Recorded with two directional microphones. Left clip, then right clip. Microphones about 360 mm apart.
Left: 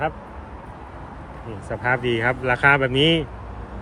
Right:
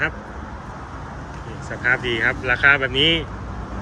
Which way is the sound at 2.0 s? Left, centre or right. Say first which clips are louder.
Right 1 dB; centre.